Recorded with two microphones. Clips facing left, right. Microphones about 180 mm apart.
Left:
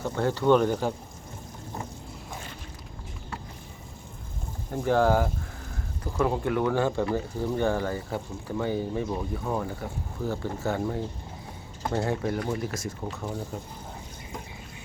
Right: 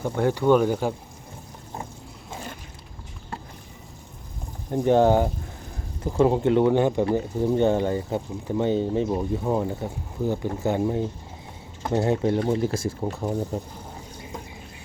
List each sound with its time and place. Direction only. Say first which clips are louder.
0.0 s speech: right 3 dB; 15° right (ahead or behind)
4.7 s speech: right 5 dB; 20° right (ahead or behind)